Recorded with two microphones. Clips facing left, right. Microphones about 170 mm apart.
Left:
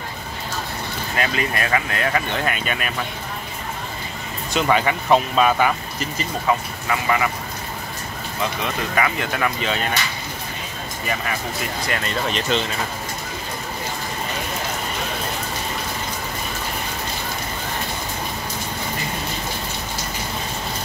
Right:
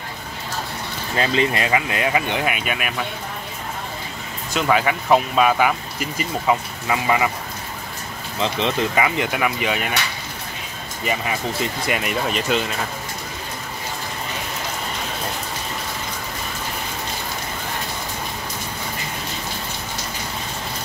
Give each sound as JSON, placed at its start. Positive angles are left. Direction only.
{"t": 1.1, "sound": "speech", "side_deg": -25}
{"t": 4.6, "sound": "speech", "side_deg": -5}
{"t": 8.4, "sound": "speech", "side_deg": -25}
{"t": 11.1, "sound": "speech", "side_deg": -20}